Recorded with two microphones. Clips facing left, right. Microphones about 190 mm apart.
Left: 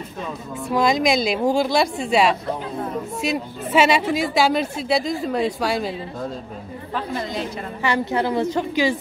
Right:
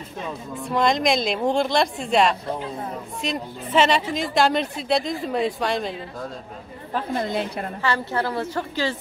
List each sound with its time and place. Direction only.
0.7 s a woman's voice: 5° left (ahead or behind)
6.9 s a woman's voice: 50° right (ahead or behind)
7.8 s a woman's voice: 15° left (ahead or behind)